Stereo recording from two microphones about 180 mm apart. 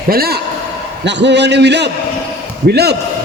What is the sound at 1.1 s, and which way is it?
A man's voice, 75° right (ahead or behind).